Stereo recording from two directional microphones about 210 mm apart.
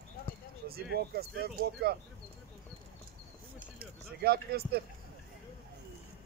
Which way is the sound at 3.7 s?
50° right (ahead or behind).